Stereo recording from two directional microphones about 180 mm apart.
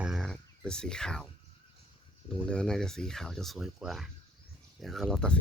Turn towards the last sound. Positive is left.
turn(degrees=5)  # may be behind; listen again after turning